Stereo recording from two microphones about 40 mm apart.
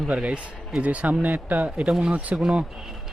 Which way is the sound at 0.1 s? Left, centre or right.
Right.